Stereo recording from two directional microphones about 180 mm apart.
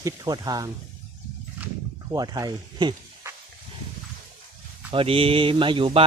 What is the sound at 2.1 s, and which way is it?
Speech, 20° right (ahead or behind).